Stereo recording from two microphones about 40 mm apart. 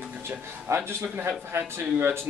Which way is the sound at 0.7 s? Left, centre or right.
Right.